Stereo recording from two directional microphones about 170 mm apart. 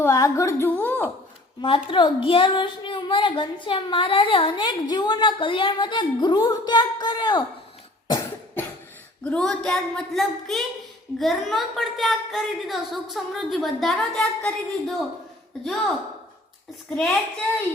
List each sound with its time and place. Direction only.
0.0 s a woman's voice: 20° left (ahead or behind)
1.6 s a woman's voice: 30° left (ahead or behind)
8.0 s cough: 20° left (ahead or behind)
9.2 s a woman's voice: 5° left (ahead or behind)
16.9 s a woman's voice: 5° left (ahead or behind)